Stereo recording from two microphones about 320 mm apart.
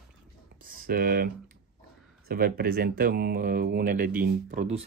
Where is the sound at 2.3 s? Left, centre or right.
Right.